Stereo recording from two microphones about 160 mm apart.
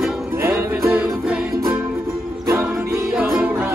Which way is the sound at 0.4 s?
15° right (ahead or behind).